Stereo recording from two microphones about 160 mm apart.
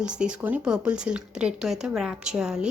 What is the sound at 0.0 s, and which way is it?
Speech, 5° right (ahead or behind).